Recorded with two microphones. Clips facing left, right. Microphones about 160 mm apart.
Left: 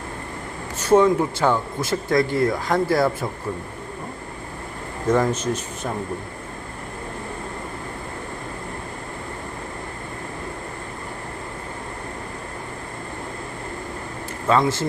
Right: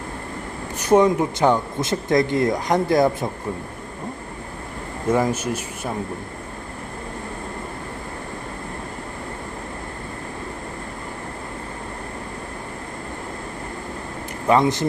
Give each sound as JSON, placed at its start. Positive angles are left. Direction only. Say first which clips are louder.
{"t": 0.8, "sound": "speech", "louder": "even", "side_deg": -15}
{"t": 5.1, "sound": "speech", "louder": "even", "side_deg": -10}
{"t": 14.4, "sound": "speech", "louder": "right 2 dB", "side_deg": -20}